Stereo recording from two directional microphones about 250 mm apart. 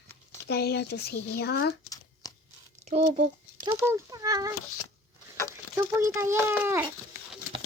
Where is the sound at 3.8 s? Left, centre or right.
Centre.